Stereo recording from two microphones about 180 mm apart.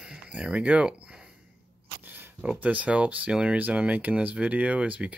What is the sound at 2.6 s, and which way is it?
Speech, 10° right (ahead or behind).